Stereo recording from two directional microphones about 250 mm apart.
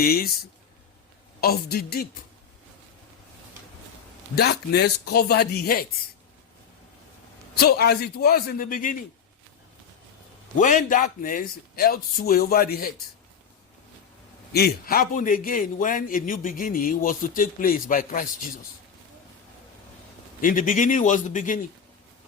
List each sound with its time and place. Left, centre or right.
0.0 s a man's voice: left
1.4 s a man's voice: left
4.4 s a man's voice: left
7.6 s a man's voice: left
10.6 s a man's voice: left
14.5 s a man's voice: left
20.4 s a man's voice: left